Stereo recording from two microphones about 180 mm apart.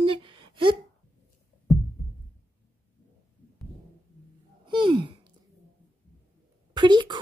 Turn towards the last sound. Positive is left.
turn(degrees=-25)  # may be behind; listen again after turning